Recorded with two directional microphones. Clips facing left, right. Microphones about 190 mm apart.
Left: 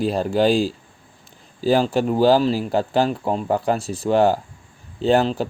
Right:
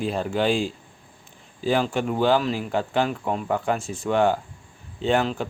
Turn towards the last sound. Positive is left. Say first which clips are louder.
# left 5 dB
turn(degrees=35)  # may be behind; listen again after turning